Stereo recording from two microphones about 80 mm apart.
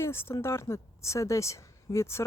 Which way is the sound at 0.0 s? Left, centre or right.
Left.